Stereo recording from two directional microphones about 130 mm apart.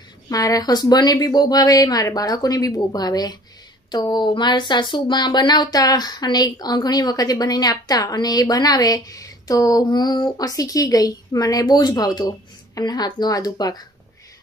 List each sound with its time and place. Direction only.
0.3 s speech: 30° left (ahead or behind)